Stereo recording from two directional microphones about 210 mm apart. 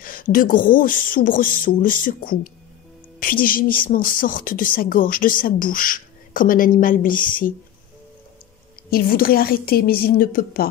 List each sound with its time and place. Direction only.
0.0 s a woman's voice: 40° left (ahead or behind)
8.9 s a woman's voice: 45° left (ahead or behind)